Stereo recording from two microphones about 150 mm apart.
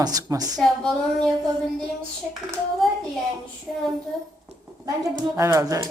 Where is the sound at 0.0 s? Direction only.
25° right (ahead or behind).